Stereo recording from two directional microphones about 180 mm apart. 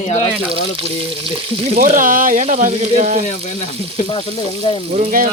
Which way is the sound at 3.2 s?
40° left (ahead or behind).